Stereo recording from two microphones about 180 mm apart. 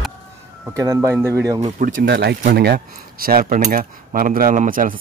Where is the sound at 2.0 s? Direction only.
65° right (ahead or behind).